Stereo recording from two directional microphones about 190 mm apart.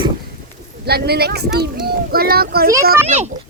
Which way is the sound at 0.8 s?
55° right (ahead or behind).